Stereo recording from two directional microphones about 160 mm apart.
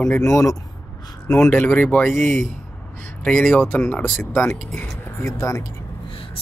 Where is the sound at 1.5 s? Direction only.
10° left (ahead or behind).